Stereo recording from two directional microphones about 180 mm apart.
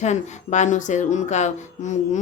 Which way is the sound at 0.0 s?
40° left (ahead or behind).